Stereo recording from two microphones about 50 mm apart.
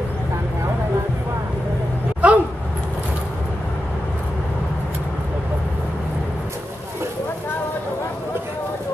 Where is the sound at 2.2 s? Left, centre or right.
Right.